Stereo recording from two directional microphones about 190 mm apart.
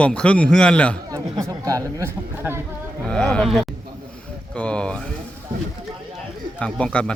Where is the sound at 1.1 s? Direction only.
20° right (ahead or behind).